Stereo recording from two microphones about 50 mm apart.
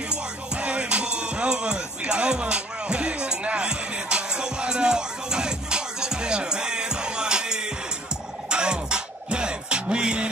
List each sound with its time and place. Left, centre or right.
0.1 s music: right